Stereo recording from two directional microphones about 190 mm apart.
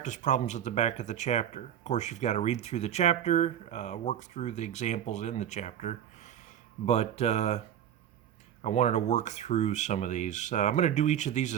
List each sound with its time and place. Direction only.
0.0 s speech: 40° left (ahead or behind)
8.6 s speech: 35° left (ahead or behind)